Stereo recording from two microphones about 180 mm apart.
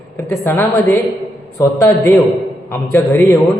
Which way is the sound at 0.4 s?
15° left (ahead or behind).